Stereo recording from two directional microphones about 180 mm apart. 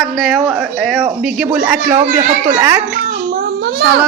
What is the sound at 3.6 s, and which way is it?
Child singing, 65° right (ahead or behind).